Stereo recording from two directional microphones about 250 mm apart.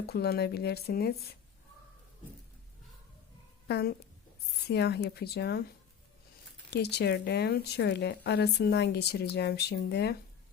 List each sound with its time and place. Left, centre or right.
0.1 s speech: left
3.7 s speech: left
6.7 s speech: left